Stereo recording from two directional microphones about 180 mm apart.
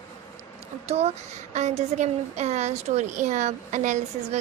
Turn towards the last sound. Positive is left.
turn(degrees=-40)  # may be behind; listen again after turning